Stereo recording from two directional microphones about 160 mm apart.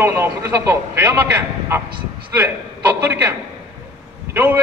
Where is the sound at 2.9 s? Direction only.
15° right (ahead or behind).